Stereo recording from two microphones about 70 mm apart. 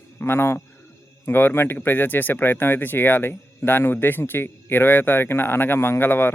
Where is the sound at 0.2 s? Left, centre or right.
Left.